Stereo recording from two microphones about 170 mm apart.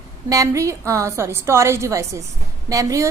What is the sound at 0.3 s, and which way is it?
A woman's voice, 20° right (ahead or behind).